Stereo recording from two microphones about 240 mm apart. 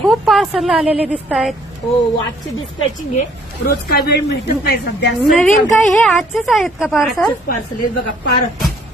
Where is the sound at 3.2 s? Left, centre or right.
Left.